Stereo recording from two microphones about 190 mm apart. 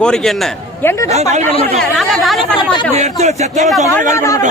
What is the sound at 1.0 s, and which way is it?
Speech, 35° right (ahead or behind).